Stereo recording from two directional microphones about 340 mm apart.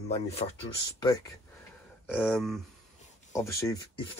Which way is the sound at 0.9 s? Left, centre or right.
Centre.